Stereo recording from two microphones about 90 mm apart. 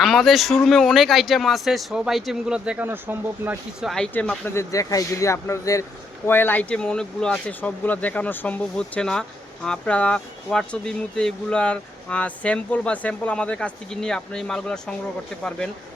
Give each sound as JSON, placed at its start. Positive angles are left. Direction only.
{"t": 0.0, "sound": "speech", "side_deg": 0}
{"t": 2.8, "sound": "speech", "side_deg": -20}
{"t": 3.8, "sound": "speech", "side_deg": -5}
{"t": 4.4, "sound": "speech", "side_deg": 35}
{"t": 6.2, "sound": "speech", "side_deg": 25}